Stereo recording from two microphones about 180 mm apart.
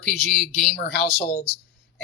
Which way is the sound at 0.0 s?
5° left (ahead or behind).